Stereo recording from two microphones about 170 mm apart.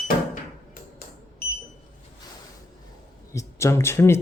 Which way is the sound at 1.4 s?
60° left (ahead or behind).